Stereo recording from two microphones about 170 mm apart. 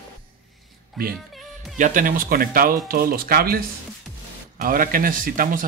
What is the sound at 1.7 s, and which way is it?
Speech, 50° right (ahead or behind).